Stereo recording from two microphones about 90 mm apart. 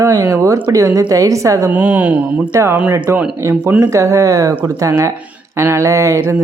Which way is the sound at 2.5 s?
35° right (ahead or behind).